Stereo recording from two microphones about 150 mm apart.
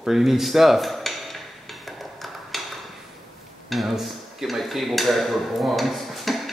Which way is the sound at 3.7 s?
Centre (ahead or behind).